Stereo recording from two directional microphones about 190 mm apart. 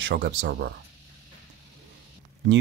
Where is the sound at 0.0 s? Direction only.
60° right (ahead or behind).